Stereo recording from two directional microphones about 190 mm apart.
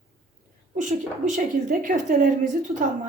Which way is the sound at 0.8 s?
40° right (ahead or behind).